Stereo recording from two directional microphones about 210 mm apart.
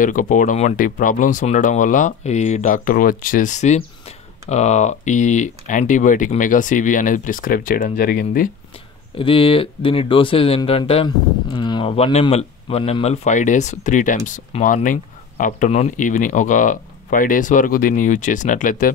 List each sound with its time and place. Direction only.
0.0 s speech: 40° left (ahead or behind)
9.1 s speech: 25° left (ahead or behind)